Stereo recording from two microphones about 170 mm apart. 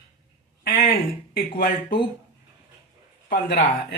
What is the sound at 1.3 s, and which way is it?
Speech, 60° left (ahead or behind).